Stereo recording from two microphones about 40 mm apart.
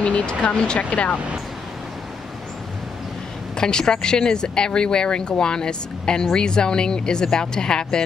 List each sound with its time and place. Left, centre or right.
0.3 s speech: left
0.7 s speech: left
3.5 s speech: centre